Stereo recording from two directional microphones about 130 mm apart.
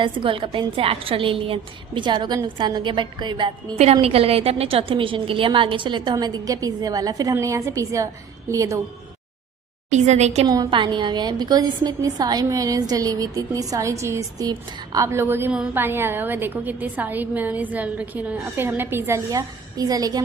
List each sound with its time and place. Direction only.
0.0 s a woman's voice: 40° right (ahead or behind)
4.0 s a woman's voice: 50° right (ahead or behind); by 8.8 s 25° right (ahead or behind)
9.9 s a woman's voice: 60° right (ahead or behind)
10.4 s a woman's voice: 30° right (ahead or behind)